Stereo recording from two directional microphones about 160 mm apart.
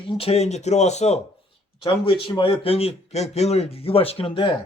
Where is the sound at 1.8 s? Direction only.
35° left (ahead or behind).